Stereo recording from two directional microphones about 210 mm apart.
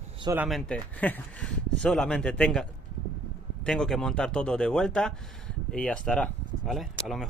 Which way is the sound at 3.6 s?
Centre (ahead or behind).